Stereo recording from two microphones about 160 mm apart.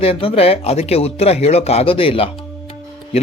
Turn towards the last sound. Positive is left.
turn(degrees=40)  # may be behind; listen again after turning